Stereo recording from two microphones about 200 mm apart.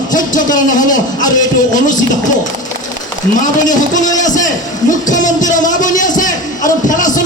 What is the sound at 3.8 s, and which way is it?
A man's voice, 40° left (ahead or behind).